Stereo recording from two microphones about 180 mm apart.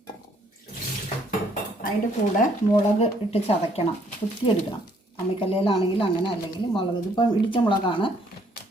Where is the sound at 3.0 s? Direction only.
35° left (ahead or behind).